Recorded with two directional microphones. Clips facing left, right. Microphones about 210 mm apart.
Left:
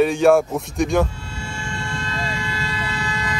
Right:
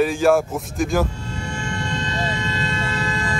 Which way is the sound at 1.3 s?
20° right (ahead or behind).